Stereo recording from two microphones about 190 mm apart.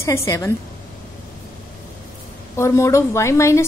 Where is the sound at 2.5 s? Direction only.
15° left (ahead or behind).